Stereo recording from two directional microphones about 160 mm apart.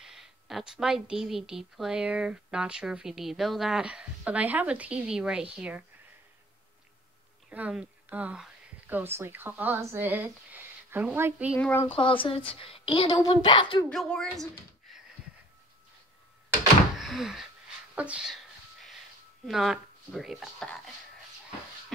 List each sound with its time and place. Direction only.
0.0 s speech: centre (ahead or behind)
7.4 s speech: 10° right (ahead or behind)
11.5 s speech: 15° left (ahead or behind)
12.0 s a woman's voice: 35° left (ahead or behind)
13.8 s speech: 5° left (ahead or behind)
17.0 s door: centre (ahead or behind)
17.9 s a sound: 10° right (ahead or behind)
19.4 s speech: centre (ahead or behind)